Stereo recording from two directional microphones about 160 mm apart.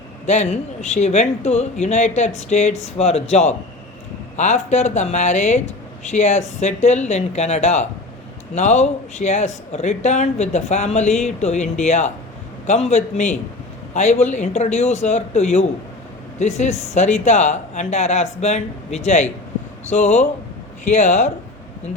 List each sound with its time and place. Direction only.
0.3 s a man's voice: 45° left (ahead or behind)